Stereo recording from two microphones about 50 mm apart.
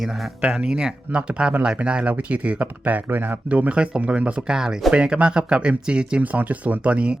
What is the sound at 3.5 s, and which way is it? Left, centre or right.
Speech, right.